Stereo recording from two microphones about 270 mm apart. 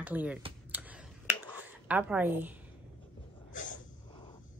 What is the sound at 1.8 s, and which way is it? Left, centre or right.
Speech, centre.